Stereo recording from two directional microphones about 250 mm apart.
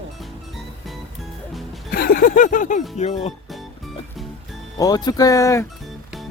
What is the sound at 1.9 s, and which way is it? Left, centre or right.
Music, left.